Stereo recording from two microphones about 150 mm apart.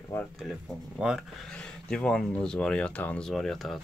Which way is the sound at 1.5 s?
5° left (ahead or behind).